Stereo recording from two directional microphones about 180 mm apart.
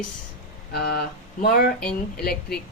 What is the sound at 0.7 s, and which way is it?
Speech, 65° left (ahead or behind).